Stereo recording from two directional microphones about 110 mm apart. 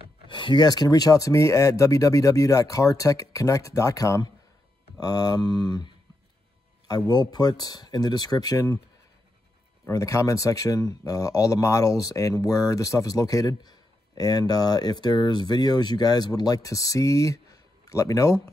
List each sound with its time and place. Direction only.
0.3 s speech: 50° left (ahead or behind)
7.1 s speech: 40° left (ahead or behind)
9.8 s speech: 30° left (ahead or behind)